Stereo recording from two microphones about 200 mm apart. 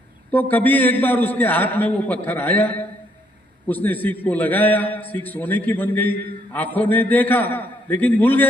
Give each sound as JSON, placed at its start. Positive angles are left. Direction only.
{"t": 0.3, "sound": "a man's voice", "side_deg": 10}